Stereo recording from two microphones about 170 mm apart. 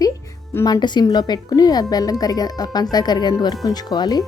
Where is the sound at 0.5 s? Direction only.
20° left (ahead or behind).